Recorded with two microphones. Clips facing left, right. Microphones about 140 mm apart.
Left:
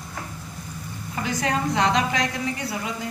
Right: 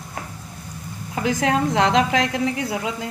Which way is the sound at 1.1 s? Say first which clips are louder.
Right 5 dB; 90° right.